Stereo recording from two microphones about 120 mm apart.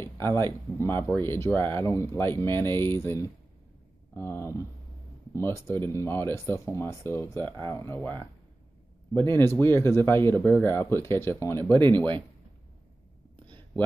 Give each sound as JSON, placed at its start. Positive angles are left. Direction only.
{"t": 0.0, "sound": "speech", "side_deg": 20}
{"t": 9.1, "sound": "speech", "side_deg": 20}
{"t": 11.7, "sound": "speech", "side_deg": -40}